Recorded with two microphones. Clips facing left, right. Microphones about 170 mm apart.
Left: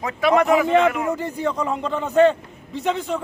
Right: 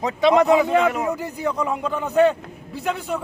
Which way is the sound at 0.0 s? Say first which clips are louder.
Right 2 dB; 20° right (ahead or behind).